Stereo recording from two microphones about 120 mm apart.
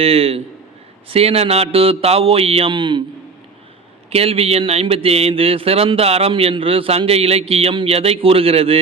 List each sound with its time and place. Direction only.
0.0 s speech: 55° right (ahead or behind)
4.1 s speech: 55° right (ahead or behind)